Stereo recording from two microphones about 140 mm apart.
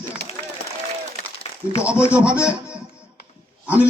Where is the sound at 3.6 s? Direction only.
10° right (ahead or behind).